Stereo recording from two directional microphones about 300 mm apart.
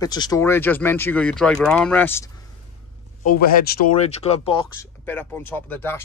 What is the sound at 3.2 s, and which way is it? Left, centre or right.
Speech, left.